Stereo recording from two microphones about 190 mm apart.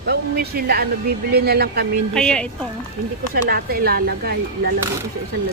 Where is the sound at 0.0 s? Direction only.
55° right (ahead or behind).